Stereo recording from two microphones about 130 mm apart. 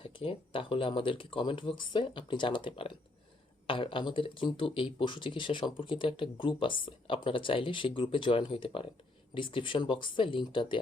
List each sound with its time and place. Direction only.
0.0 s speech: 45° left (ahead or behind)